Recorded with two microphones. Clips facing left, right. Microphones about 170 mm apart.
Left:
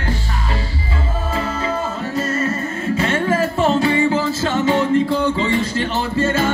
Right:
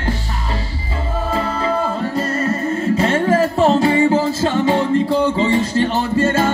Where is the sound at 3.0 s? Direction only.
30° right (ahead or behind).